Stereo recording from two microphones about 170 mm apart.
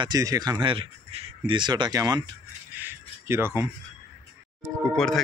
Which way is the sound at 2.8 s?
15° right (ahead or behind).